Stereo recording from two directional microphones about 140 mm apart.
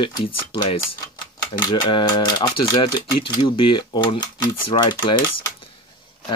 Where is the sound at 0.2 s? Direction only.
40° left (ahead or behind).